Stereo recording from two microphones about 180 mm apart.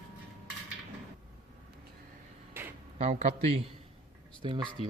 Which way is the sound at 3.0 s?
40° right (ahead or behind).